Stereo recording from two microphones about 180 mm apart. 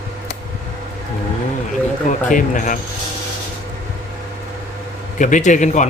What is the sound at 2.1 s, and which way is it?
Speech, 45° left (ahead or behind).